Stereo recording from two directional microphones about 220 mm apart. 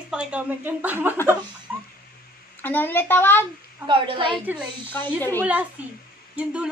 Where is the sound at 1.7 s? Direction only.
10° right (ahead or behind).